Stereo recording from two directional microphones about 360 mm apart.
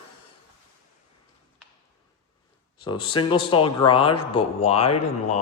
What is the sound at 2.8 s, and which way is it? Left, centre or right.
Speech, centre.